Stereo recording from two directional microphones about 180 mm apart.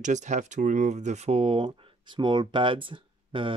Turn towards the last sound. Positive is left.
turn(degrees=-30)  # may be behind; listen again after turning